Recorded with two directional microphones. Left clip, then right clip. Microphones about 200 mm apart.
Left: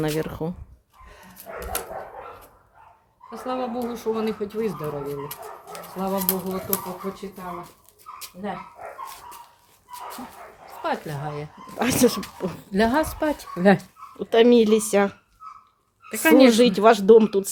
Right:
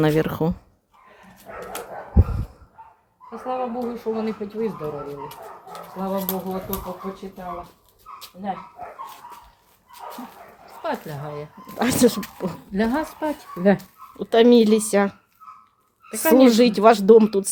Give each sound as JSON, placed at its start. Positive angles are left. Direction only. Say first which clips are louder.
{"t": 0.0, "sound": "speech", "louder": "right 6 dB", "side_deg": -30}
{"t": 1.0, "sound": "dog", "louder": "left 1 dB", "side_deg": 65}
{"t": 3.2, "sound": "speech", "louder": "right 2 dB", "side_deg": 60}
{"t": 10.8, "sound": "a woman's voice", "louder": "left 1 dB", "side_deg": 30}
{"t": 11.8, "sound": "speech", "louder": "right 1 dB", "side_deg": -15}
{"t": 12.7, "sound": "speech", "louder": "left 3 dB", "side_deg": 65}
{"t": 14.2, "sound": "speech", "louder": "right 1 dB", "side_deg": -10}
{"t": 16.3, "sound": "speech", "louder": "even", "side_deg": -10}